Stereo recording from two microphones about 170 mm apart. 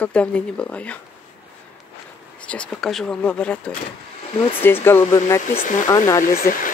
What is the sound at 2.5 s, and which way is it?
Speech, 5° left (ahead or behind).